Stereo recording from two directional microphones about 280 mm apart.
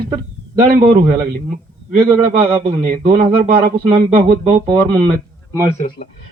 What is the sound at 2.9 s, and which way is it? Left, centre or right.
Speech, right.